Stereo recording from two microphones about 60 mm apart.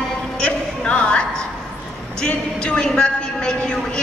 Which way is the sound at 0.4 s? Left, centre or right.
Left.